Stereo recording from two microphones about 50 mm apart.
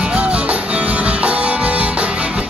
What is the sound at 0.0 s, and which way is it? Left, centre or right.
Music, right.